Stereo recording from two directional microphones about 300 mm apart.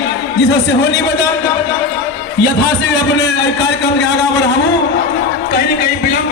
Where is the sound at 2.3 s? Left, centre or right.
Left.